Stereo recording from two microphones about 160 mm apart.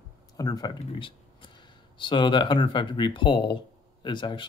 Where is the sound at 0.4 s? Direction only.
25° left (ahead or behind).